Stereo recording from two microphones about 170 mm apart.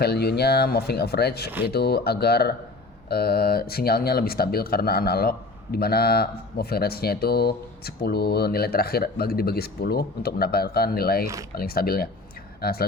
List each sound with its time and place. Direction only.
0.0 s speech: 70° left (ahead or behind)